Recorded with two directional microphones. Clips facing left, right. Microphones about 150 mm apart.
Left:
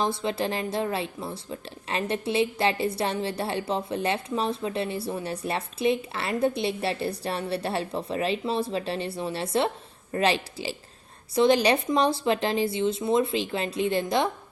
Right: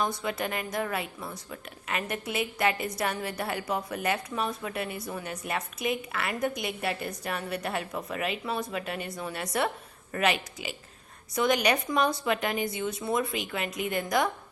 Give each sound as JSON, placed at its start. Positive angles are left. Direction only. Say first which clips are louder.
{"t": 0.0, "sound": "speech", "louder": "left 4 dB", "side_deg": 25}